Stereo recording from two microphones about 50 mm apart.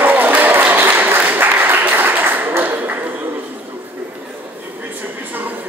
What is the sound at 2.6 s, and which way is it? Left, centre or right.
Ping, right.